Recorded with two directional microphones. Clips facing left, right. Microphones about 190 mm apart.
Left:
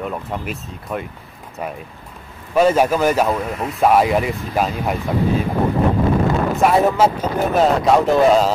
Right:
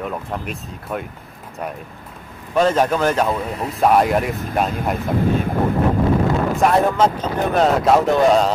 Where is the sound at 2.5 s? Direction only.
10° left (ahead or behind).